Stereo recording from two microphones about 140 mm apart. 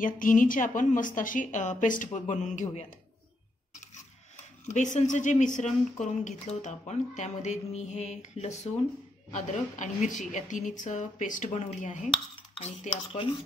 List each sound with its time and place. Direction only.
0.0 s a woman's voice: 70° left (ahead or behind)
4.6 s speech: 60° left (ahead or behind)
12.5 s speech: 50° left (ahead or behind)